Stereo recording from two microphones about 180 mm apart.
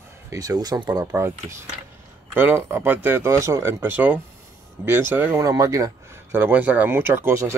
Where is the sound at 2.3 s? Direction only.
10° right (ahead or behind).